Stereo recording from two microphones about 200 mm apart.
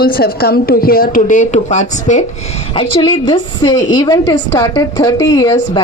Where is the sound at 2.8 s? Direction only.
25° left (ahead or behind).